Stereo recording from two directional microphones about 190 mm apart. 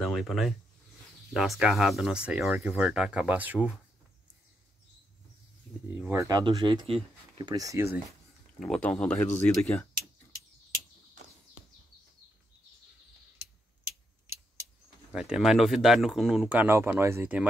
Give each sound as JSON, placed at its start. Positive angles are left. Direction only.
{"t": 0.0, "sound": "speech", "side_deg": 0}
{"t": 5.9, "sound": "speech", "side_deg": -15}
{"t": 8.5, "sound": "speech", "side_deg": 5}
{"t": 15.1, "sound": "speech", "side_deg": -5}